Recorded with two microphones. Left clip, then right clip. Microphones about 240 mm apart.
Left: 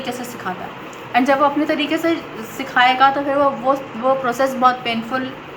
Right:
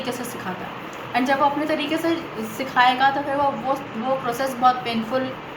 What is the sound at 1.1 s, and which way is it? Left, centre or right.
A woman's voice, centre.